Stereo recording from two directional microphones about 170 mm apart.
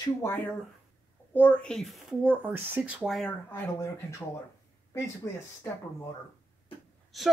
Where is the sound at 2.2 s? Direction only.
10° right (ahead or behind).